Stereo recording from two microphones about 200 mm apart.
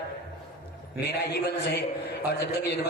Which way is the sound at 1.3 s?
55° left (ahead or behind).